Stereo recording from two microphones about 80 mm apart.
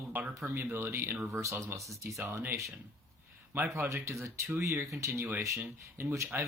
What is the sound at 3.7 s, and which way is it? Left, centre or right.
Speech, right.